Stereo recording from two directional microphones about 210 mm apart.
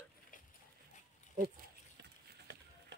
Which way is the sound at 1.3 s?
45° right (ahead or behind).